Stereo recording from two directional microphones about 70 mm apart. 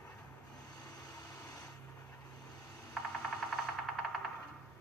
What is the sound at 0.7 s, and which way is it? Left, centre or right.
Vehicle, left.